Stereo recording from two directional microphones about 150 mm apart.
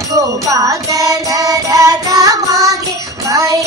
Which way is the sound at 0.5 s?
20° right (ahead or behind).